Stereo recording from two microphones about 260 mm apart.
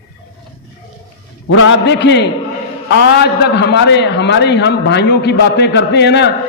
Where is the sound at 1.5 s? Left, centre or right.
Left.